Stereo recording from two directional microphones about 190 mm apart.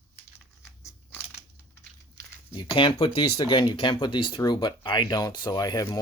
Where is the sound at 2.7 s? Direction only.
25° left (ahead or behind).